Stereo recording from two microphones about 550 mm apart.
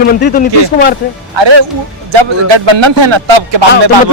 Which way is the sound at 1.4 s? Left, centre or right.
Right.